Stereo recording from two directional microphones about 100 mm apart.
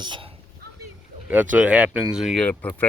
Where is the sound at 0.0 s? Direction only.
50° right (ahead or behind).